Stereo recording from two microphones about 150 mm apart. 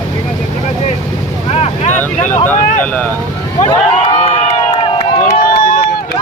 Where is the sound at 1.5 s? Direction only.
45° left (ahead or behind).